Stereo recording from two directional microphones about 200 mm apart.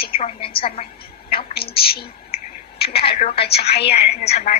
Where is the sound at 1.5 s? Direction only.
50° left (ahead or behind).